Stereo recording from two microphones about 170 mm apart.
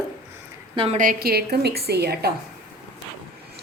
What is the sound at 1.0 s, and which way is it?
A woman's voice, 60° right (ahead or behind).